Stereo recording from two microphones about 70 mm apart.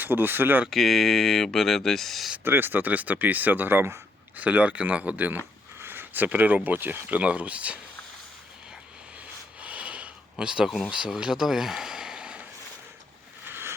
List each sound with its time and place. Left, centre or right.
0.0 s speech: right
0.7 s speech: centre
2.4 s speech: right
9.6 s a sound: centre
10.9 s speech: centre
13.4 s a sound: right